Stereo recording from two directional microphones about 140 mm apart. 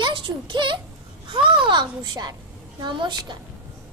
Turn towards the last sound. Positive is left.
turn(degrees=-35)  # may be behind; listen again after turning